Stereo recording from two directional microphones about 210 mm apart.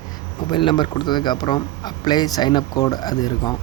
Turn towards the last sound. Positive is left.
turn(degrees=20)  # may be behind; listen again after turning